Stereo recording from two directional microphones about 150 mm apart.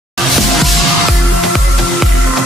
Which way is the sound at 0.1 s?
Centre (ahead or behind).